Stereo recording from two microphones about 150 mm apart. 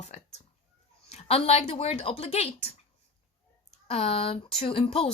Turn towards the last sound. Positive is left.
turn(degrees=40)  # may be behind; listen again after turning